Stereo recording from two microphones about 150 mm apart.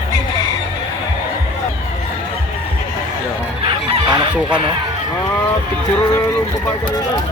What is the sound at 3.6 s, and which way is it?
Chicken, 40° right (ahead or behind).